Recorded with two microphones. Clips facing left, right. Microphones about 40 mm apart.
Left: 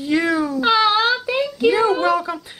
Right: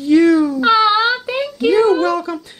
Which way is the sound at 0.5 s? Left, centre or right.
Centre.